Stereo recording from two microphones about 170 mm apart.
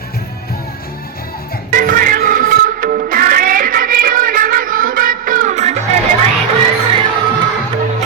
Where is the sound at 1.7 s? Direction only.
55° right (ahead or behind).